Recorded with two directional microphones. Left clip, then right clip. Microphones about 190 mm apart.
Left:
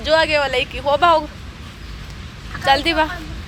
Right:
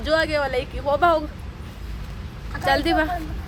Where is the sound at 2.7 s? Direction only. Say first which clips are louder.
Left 4 dB; 15° right (ahead or behind).